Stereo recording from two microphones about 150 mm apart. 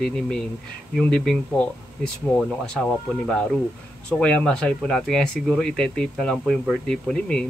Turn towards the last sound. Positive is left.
turn(degrees=5)  # may be behind; listen again after turning